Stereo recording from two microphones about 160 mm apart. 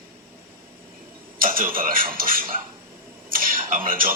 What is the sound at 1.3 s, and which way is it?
Speech, 60° right (ahead or behind).